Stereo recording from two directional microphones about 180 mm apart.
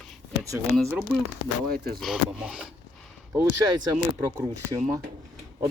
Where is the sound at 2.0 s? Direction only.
5° right (ahead or behind).